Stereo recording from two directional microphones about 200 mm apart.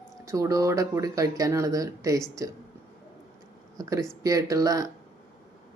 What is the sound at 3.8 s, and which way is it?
Speech, 15° right (ahead or behind).